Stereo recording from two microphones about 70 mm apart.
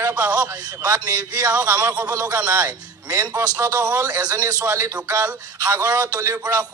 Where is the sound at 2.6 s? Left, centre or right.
Right.